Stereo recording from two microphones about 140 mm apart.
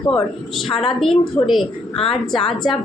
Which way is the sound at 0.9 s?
Centre (ahead or behind).